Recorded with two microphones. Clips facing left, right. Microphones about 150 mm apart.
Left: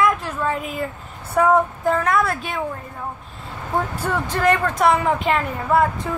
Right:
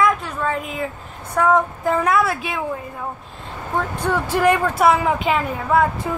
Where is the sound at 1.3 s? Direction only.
5° left (ahead or behind).